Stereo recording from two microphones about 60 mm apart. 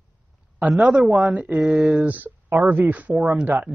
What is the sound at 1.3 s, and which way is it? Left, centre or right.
Speech, right.